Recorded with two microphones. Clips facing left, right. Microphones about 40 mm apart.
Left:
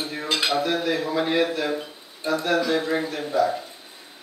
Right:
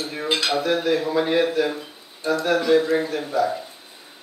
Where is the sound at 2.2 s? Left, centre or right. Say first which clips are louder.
Right 2 dB; left.